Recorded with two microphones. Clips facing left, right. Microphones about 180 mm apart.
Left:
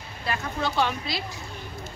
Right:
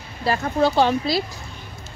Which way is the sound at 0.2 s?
35° right (ahead or behind).